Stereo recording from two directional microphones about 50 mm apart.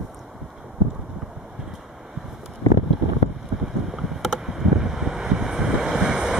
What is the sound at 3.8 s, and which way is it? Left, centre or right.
Boat, centre.